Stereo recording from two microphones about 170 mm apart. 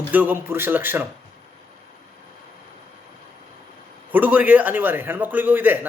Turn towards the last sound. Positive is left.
turn(degrees=-10)  # may be behind; listen again after turning